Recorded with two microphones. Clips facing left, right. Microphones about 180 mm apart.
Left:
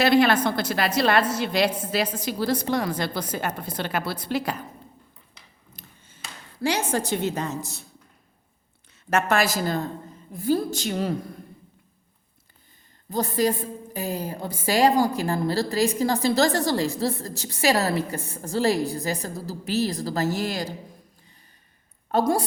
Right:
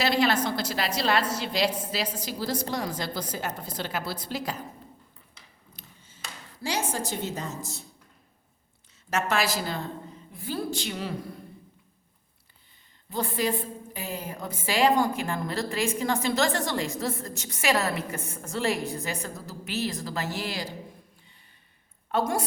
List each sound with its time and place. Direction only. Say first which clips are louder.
0.0 s a woman's voice: left 6 dB; 55° left (ahead or behind)
5.7 s a sound: left 3 dB; 55° left (ahead or behind)
9.0 s a woman's voice: left 4 dB; 55° left (ahead or behind)
13.1 s a woman's voice: left 5 dB; 40° left (ahead or behind)
22.1 s a woman's voice: left 5 dB; 35° left (ahead or behind)